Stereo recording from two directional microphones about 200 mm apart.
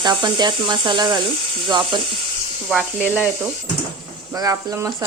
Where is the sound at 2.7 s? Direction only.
5° right (ahead or behind).